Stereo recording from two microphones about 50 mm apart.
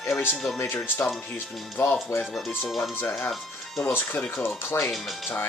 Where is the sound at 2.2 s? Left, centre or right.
Centre.